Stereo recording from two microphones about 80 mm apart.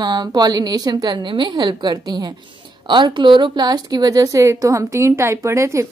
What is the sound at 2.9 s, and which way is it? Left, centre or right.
A woman's voice, right.